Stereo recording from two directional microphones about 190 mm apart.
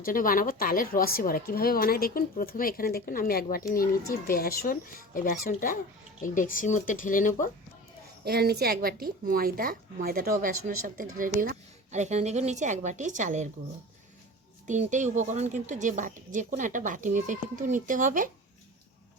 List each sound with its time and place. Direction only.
0.0 s speech: 45° left (ahead or behind)
8.2 s a woman's voice: 55° right (ahead or behind); by 13.5 s 40° right (ahead or behind)
14.7 s a woman's voice: 40° right (ahead or behind)